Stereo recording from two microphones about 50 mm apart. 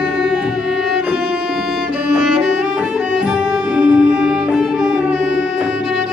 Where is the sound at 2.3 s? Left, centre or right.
Right.